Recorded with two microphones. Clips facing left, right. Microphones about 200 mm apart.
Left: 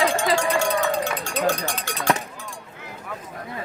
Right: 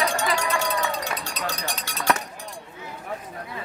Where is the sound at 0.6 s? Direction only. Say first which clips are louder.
Left 5 dB; 50° left (ahead or behind).